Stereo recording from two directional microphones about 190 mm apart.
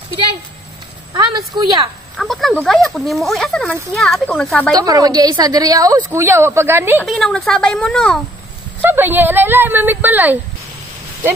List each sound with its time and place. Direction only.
1.1 s a woman's voice: 20° right (ahead or behind)
2.1 s speech: centre (ahead or behind)
4.7 s a woman's voice: 20° right (ahead or behind)
7.0 s speech: centre (ahead or behind)
8.8 s speech: 10° right (ahead or behind)